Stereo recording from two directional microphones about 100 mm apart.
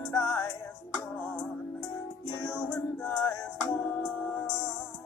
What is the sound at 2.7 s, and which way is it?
Music, 20° left (ahead or behind).